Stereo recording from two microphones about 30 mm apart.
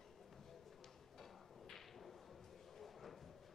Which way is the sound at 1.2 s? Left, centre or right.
Centre.